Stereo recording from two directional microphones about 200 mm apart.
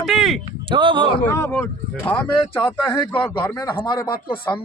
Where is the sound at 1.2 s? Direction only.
10° left (ahead or behind).